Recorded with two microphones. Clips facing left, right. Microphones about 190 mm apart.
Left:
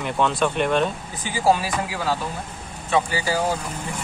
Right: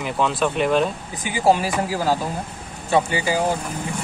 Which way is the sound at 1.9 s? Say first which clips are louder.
Right 5 dB; 40° right (ahead or behind).